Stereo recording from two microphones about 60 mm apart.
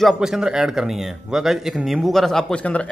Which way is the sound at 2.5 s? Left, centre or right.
Left.